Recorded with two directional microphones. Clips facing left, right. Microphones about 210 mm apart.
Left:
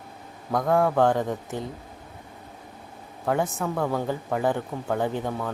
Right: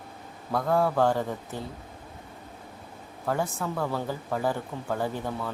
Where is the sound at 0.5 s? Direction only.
15° left (ahead or behind).